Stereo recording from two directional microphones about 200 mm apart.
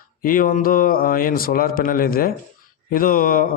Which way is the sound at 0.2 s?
45° left (ahead or behind).